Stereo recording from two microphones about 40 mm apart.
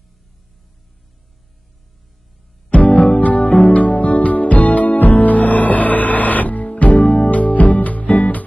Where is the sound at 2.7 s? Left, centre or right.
Left.